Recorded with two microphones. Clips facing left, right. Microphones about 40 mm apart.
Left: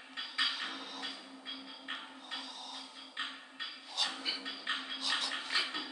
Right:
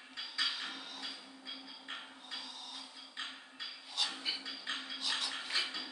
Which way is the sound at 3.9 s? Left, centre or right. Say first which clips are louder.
Left 1 dB; centre.